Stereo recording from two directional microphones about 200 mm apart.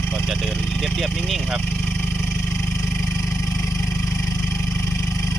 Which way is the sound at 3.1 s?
15° left (ahead or behind).